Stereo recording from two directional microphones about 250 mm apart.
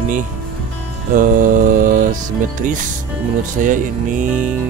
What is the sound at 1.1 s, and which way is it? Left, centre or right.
Speech, right.